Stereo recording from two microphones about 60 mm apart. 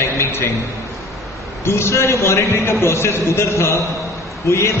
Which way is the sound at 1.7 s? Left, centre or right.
Left.